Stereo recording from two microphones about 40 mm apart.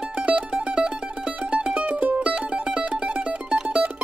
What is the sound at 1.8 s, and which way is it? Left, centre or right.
Mandolin, right.